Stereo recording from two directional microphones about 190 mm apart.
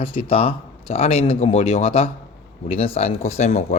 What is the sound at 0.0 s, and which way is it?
Speech, 30° left (ahead or behind).